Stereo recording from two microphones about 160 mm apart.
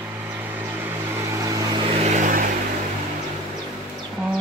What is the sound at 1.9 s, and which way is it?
Vehicle, 45° right (ahead or behind).